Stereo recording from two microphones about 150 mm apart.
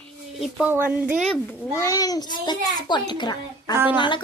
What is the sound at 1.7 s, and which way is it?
A child's voice, 20° left (ahead or behind).